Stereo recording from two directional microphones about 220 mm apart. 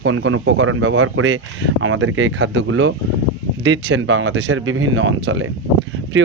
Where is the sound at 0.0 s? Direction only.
65° right (ahead or behind).